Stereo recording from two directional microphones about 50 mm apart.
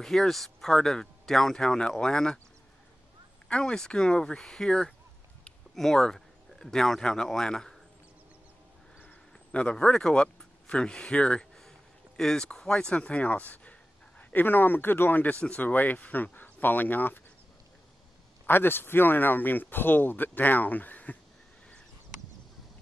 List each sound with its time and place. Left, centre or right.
0.0 s speech: centre
3.4 s speech: centre
9.0 s speech: left
14.3 s speech: left
15.3 s speech: left
18.5 s speech: left